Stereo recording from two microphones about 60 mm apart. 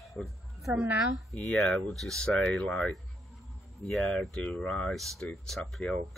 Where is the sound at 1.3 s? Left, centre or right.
Centre.